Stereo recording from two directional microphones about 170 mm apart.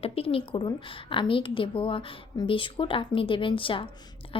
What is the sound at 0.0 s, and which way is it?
A woman's voice, 35° left (ahead or behind).